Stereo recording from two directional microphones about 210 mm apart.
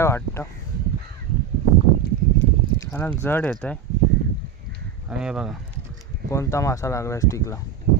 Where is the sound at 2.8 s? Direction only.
10° left (ahead or behind).